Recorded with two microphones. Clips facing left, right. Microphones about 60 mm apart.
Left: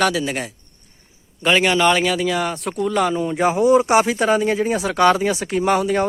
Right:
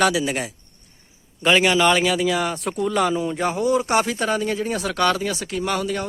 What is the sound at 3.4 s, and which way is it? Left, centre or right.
Speech, centre.